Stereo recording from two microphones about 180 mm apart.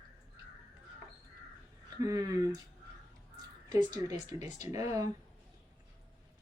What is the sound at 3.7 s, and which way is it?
Speech, 20° right (ahead or behind).